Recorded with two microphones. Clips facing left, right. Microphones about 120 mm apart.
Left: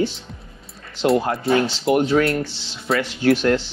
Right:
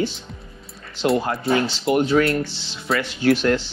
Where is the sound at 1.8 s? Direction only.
25° left (ahead or behind).